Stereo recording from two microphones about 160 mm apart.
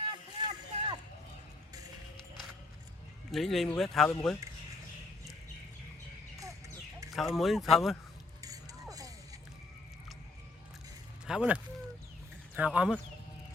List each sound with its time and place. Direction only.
0.1 s boat: 30° right (ahead or behind)
3.3 s speech: centre (ahead or behind)
7.1 s speech: centre (ahead or behind)
8.4 s a sound: 20° right (ahead or behind)
11.3 s speech: 5° right (ahead or behind)